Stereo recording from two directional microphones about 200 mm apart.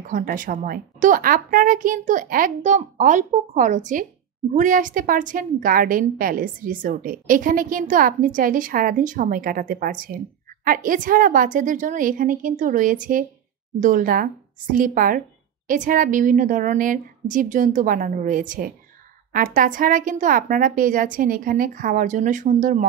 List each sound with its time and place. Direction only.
0.0 s a woman's voice: 45° right (ahead or behind)